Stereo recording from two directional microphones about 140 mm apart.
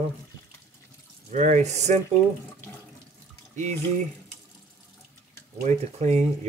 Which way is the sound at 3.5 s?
55° right (ahead or behind).